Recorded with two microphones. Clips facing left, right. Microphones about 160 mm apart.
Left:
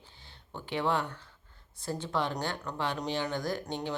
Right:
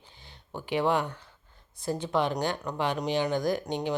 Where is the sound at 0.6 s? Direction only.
15° right (ahead or behind).